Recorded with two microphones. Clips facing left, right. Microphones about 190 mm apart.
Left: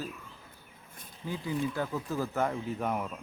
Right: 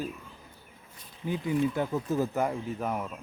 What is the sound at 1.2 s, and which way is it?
Speech, 20° right (ahead or behind).